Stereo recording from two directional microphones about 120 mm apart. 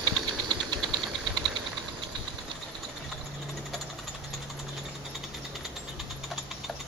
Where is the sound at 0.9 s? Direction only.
40° right (ahead or behind).